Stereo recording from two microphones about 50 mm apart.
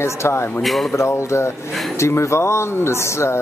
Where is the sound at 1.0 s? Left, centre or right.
Left.